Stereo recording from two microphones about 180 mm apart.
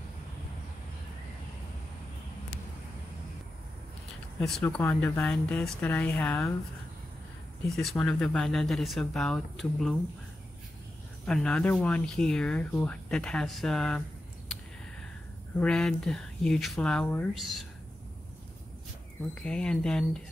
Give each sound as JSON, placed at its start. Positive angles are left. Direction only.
{"t": 4.4, "sound": "speech", "side_deg": 0}
{"t": 7.6, "sound": "speech", "side_deg": 0}
{"t": 11.2, "sound": "speech", "side_deg": 5}
{"t": 15.6, "sound": "speech", "side_deg": 5}
{"t": 19.3, "sound": "speech", "side_deg": 5}